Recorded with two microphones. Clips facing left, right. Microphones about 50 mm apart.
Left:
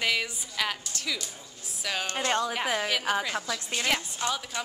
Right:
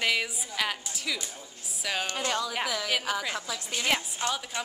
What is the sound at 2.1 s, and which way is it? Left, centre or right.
Speech, left.